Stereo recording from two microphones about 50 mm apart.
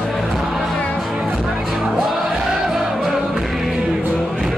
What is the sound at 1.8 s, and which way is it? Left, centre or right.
Music, centre.